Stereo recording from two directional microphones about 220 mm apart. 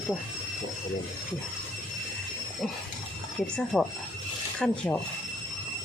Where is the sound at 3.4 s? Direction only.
5° left (ahead or behind).